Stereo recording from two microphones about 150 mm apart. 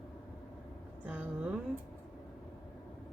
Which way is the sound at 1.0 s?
10° right (ahead or behind).